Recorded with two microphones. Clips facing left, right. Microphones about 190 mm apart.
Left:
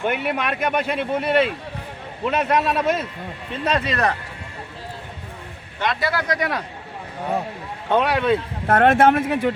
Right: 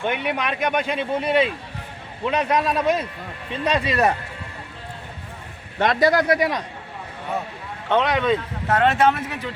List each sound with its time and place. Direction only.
0.0 s speech: 5° left (ahead or behind)
5.8 s speech: 45° right (ahead or behind)
7.9 s speech: 10° left (ahead or behind)
8.6 s speech: 55° left (ahead or behind)